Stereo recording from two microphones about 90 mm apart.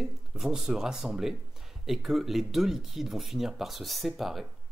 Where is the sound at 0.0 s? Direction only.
5° right (ahead or behind).